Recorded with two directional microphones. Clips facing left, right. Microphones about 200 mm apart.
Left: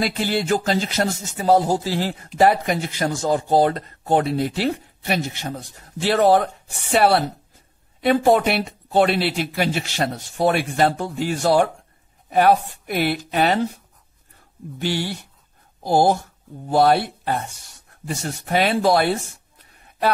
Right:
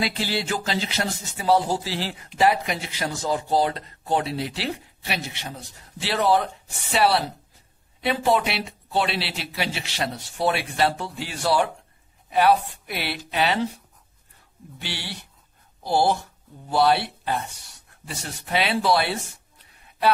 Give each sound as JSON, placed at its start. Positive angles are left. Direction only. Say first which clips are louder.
{"t": 0.0, "sound": "speech", "louder": "left 4 dB", "side_deg": 50}
{"t": 14.8, "sound": "speech", "louder": "left 11 dB", "side_deg": 45}